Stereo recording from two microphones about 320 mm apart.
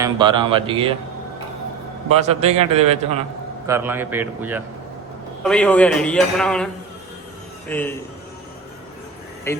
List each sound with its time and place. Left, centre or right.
0.0 s speech: centre
2.1 s a man's voice: centre
3.7 s a man's voice: centre
7.7 s a man's voice: centre
9.5 s speech: centre